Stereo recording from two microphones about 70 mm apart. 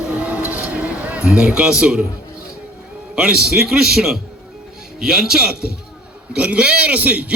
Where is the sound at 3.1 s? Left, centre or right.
Centre.